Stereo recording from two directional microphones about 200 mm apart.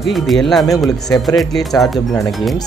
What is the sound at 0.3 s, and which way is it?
Speech, centre (ahead or behind).